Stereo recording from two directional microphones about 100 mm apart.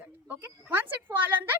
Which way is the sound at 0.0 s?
15° right (ahead or behind).